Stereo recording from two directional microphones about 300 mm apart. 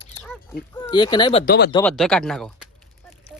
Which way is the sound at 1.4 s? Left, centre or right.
Left.